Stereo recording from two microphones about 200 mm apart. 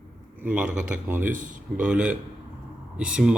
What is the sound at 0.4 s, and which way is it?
Speech, 5° right (ahead or behind).